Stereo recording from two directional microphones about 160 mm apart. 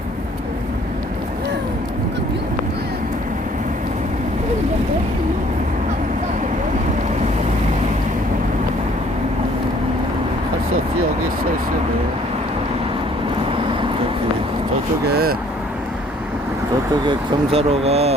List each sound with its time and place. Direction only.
15.0 s vehicle: 75° right (ahead or behind)
17.1 s vehicle: 35° right (ahead or behind)